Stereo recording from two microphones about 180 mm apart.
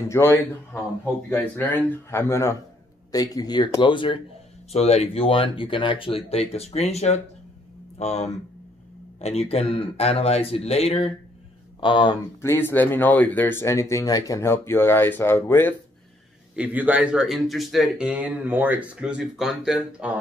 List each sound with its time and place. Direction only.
0.1 s speech: 10° left (ahead or behind)
12.4 s speech: 15° left (ahead or behind)
16.5 s speech: 10° right (ahead or behind)